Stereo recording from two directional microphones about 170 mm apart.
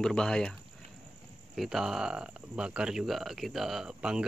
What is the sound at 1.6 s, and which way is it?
Speech, centre (ahead or behind).